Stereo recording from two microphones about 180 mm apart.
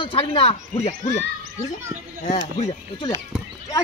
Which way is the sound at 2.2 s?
40° left (ahead or behind).